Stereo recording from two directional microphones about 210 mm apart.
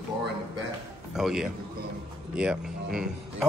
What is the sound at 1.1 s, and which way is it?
Speech, centre (ahead or behind).